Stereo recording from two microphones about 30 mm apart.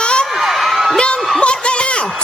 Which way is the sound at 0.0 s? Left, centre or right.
Left.